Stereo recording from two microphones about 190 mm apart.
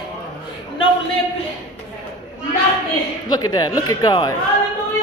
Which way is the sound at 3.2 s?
20° left (ahead or behind).